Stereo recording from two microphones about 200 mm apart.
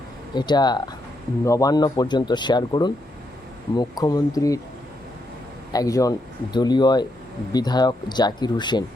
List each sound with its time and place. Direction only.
0.3 s speech: 20° left (ahead or behind)
5.7 s speech: 15° left (ahead or behind)